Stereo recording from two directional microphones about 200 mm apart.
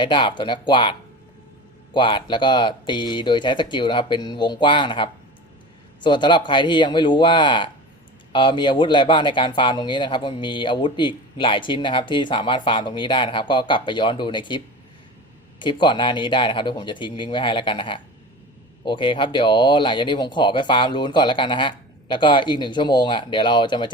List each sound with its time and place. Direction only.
0.0 s speech: 25° left (ahead or behind)